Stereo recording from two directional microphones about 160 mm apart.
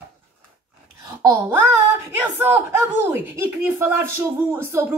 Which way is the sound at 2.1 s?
10° right (ahead or behind).